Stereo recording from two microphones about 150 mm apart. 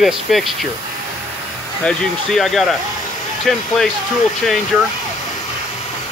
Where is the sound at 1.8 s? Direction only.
Centre (ahead or behind).